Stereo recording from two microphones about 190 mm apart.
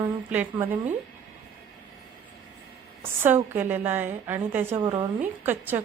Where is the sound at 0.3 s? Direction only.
10° right (ahead or behind).